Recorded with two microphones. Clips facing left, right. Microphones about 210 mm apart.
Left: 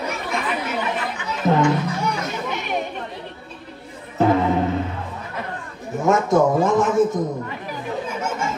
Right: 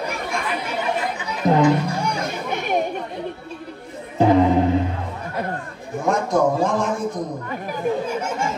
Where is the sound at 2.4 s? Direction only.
50° right (ahead or behind).